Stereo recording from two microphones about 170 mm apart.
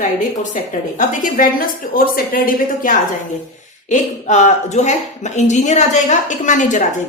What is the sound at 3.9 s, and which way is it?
A woman's voice, 45° left (ahead or behind).